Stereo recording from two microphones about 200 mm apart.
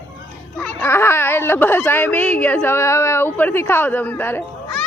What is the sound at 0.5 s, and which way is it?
Speech, 10° left (ahead or behind).